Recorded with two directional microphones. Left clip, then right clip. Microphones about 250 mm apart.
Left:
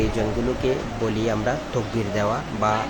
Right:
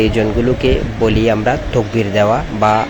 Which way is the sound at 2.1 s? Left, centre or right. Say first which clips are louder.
Right 11 dB; centre.